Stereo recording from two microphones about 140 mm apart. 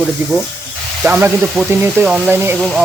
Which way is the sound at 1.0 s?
15° right (ahead or behind).